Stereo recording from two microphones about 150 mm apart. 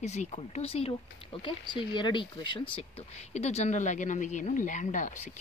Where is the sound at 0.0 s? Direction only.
50° left (ahead or behind).